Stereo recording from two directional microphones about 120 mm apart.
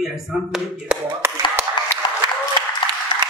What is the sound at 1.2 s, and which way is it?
Speech, 20° right (ahead or behind).